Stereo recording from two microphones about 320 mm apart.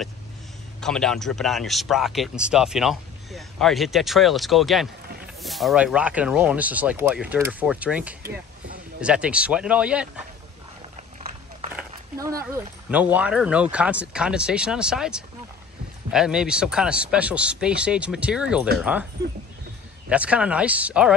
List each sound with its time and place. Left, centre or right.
0.7 s a man's voice: centre
8.2 s speech: right
9.0 s a man's voice: centre
11.9 s a man's voice: centre
20.1 s a man's voice: centre